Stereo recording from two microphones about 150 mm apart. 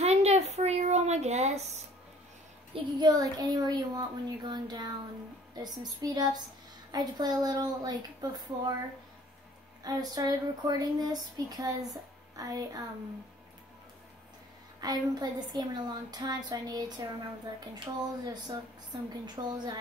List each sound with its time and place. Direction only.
0.0 s a sound: 45° right (ahead or behind)
2.7 s speech: 25° right (ahead or behind)
9.8 s speech: 25° right (ahead or behind)
14.8 s speech: 25° right (ahead or behind)